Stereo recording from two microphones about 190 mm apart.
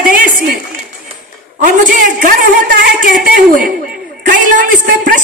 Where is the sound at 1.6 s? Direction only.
45° right (ahead or behind).